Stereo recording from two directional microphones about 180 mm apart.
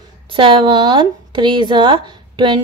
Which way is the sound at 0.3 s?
30° right (ahead or behind).